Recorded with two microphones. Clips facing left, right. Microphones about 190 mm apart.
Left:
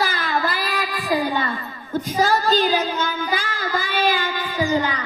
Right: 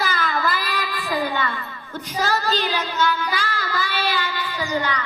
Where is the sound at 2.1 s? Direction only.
50° left (ahead or behind).